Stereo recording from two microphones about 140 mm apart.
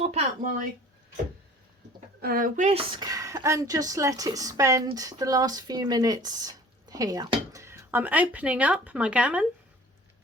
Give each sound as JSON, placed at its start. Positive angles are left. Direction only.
{"t": 0.0, "sound": "a sound", "side_deg": -50}
{"t": 2.2, "sound": "speech", "side_deg": -85}
{"t": 2.7, "sound": "speech", "side_deg": -30}